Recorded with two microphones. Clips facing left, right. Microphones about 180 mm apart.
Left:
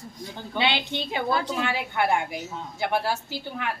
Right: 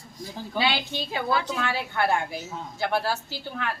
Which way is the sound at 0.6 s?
20° left (ahead or behind).